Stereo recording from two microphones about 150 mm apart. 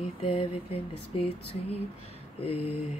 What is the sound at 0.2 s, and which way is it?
Speech, 40° left (ahead or behind).